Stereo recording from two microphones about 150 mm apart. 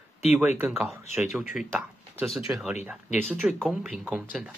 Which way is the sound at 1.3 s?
5° right (ahead or behind).